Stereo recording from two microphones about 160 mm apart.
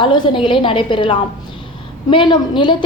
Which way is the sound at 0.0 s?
30° left (ahead or behind).